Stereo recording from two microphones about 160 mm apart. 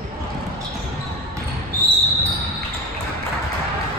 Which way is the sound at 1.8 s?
80° right.